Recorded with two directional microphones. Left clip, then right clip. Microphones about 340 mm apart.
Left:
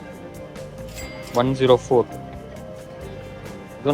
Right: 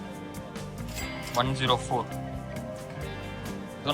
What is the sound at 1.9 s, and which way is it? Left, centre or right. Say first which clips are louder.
Speech: left 11 dB; left.